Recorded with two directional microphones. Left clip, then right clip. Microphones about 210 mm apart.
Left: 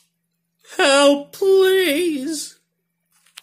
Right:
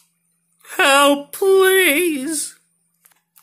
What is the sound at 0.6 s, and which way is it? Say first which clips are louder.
Speech: right 1 dB; 10° left (ahead or behind).